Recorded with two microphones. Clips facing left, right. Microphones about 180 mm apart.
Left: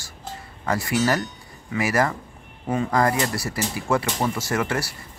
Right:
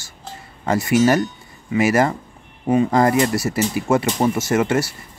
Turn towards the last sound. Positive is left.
turn(degrees=-20)  # may be behind; listen again after turning